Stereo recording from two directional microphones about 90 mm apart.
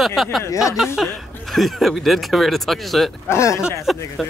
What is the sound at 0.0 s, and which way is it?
Speech, centre (ahead or behind).